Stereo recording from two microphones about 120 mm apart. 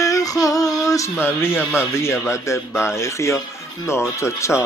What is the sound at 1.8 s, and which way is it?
Speech, 20° left (ahead or behind).